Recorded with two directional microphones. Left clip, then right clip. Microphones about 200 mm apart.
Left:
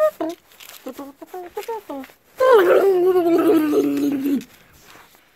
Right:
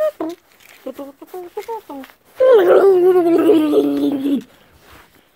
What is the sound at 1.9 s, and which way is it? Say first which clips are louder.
Speech: left 1 dB; 10° left (ahead or behind).